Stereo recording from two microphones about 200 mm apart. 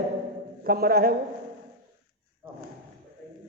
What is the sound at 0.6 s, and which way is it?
Speech, 50° right (ahead or behind).